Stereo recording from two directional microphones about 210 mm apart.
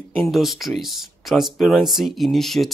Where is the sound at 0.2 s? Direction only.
Centre (ahead or behind).